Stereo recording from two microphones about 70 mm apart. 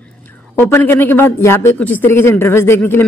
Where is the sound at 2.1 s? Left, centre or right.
Left.